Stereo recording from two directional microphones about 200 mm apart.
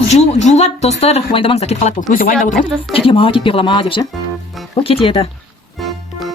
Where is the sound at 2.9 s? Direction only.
25° left (ahead or behind).